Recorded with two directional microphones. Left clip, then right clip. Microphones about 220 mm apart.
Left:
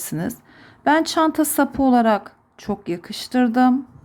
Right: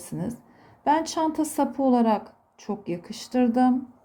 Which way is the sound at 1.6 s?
15° left (ahead or behind).